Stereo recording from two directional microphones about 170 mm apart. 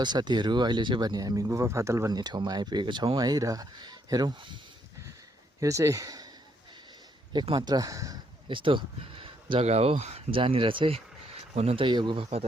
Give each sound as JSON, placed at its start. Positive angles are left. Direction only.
{"t": 0.0, "sound": "speech", "side_deg": -25}
{"t": 5.5, "sound": "speech", "side_deg": -20}
{"t": 7.3, "sound": "speech", "side_deg": -30}